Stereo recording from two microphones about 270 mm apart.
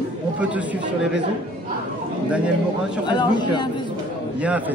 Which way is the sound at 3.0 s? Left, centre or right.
Centre.